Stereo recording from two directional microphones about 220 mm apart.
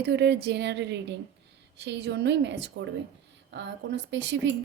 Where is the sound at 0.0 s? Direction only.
50° right (ahead or behind).